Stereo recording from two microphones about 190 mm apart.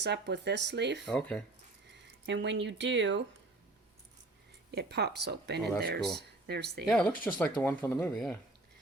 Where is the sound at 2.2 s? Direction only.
70° right (ahead or behind).